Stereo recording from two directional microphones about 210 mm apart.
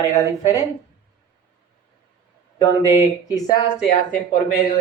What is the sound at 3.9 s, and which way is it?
Speech, 40° left (ahead or behind).